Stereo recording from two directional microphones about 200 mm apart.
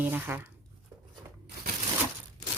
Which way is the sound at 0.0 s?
10° right (ahead or behind).